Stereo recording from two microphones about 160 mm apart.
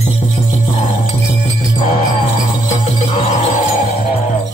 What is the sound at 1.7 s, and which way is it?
Jingle bell, 45° left (ahead or behind).